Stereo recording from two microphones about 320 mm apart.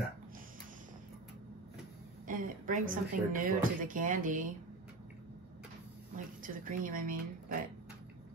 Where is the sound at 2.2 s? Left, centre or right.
Right.